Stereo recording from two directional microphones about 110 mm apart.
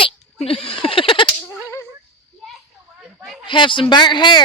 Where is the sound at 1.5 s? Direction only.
25° left (ahead or behind).